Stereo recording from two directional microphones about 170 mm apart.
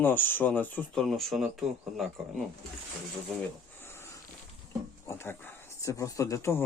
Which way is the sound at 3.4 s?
15° left (ahead or behind).